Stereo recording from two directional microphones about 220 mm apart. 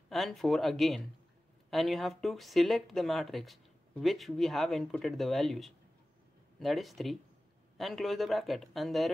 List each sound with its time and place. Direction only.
0.1 s speech: centre (ahead or behind)